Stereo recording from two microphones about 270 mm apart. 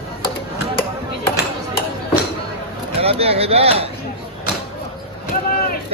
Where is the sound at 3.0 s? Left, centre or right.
Right.